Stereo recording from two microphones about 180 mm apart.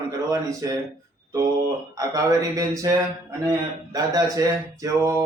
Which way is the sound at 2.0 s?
20° right (ahead or behind).